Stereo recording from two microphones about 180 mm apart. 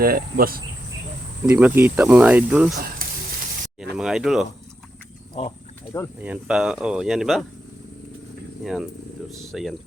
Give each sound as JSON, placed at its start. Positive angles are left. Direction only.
{"t": 0.0, "sound": "speech", "side_deg": -55}
{"t": 1.5, "sound": "speech", "side_deg": -10}
{"t": 2.7, "sound": "sizzle", "side_deg": -50}
{"t": 3.9, "sound": "speech", "side_deg": 0}
{"t": 5.3, "sound": "speech", "side_deg": 25}
{"t": 6.1, "sound": "speech", "side_deg": -5}
{"t": 8.6, "sound": "speech", "side_deg": 0}